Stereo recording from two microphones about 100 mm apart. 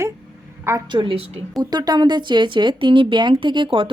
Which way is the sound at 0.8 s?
50° right (ahead or behind).